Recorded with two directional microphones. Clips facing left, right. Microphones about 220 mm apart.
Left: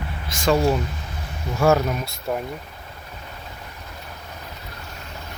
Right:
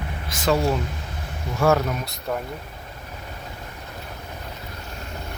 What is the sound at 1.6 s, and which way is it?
Speech, centre (ahead or behind).